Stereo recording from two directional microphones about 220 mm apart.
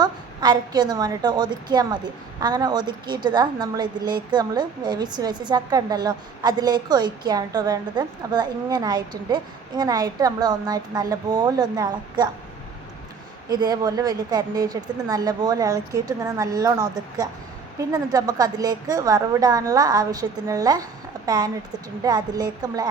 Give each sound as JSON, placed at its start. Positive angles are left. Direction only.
{"t": 0.0, "sound": "a woman's voice", "side_deg": -20}
{"t": 13.5, "sound": "a woman's voice", "side_deg": -20}